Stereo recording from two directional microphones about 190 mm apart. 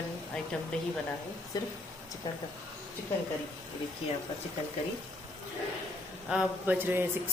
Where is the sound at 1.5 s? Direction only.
20° left (ahead or behind).